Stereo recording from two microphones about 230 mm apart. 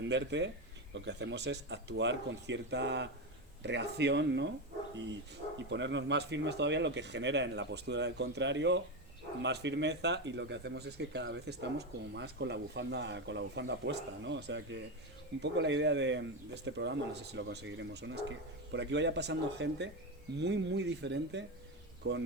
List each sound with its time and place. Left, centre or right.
0.1 s speech: right
5.5 s speech: right